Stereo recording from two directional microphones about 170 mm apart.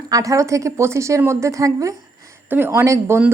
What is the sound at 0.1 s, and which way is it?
A woman's voice, 20° right (ahead or behind).